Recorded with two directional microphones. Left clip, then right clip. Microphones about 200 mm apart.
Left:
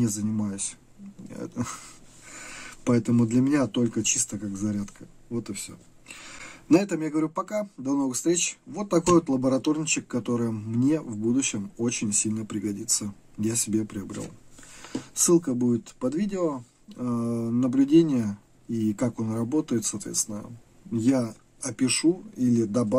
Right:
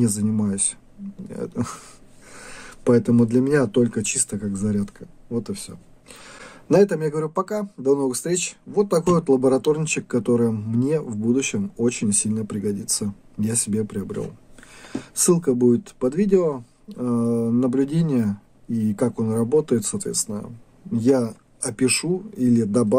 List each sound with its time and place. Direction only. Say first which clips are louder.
0.0 s speech: right 5 dB; 50° right (ahead or behind)